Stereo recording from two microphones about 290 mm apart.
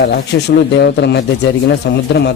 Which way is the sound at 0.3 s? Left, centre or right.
Left.